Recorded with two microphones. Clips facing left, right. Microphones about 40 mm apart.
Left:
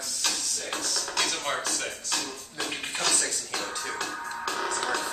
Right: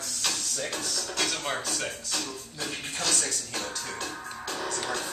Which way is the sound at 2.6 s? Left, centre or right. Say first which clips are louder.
Left 3 dB; left.